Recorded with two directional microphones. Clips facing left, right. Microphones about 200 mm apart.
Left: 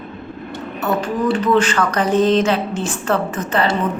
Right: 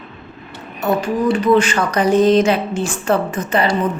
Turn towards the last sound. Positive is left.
turn(degrees=-15)  # may be behind; listen again after turning